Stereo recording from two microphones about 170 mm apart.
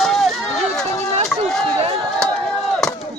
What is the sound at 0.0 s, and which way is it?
Run, centre (ahead or behind).